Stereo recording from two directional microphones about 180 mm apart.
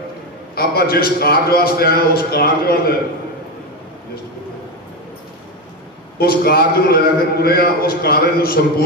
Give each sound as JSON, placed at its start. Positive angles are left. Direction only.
{"t": 0.6, "sound": "a man's voice", "side_deg": 60}
{"t": 6.1, "sound": "a man's voice", "side_deg": 55}